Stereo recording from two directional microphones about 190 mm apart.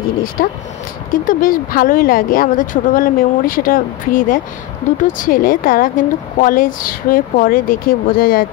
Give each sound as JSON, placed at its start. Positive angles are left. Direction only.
{"t": 0.4, "sound": "speech", "side_deg": 50}